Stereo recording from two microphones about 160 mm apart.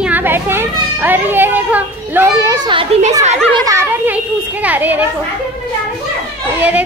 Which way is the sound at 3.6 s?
15° right (ahead or behind).